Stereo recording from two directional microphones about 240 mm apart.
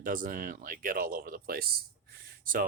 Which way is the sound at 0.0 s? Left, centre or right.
Right.